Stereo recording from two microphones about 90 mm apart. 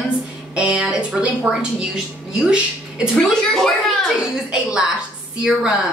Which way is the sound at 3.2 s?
10° left (ahead or behind).